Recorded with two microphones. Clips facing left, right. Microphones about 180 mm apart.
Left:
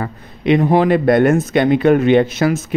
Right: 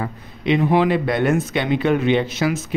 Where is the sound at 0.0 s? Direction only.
50° left (ahead or behind).